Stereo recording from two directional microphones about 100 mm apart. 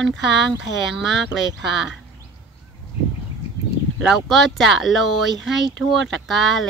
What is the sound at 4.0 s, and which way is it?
Speech, centre (ahead or behind).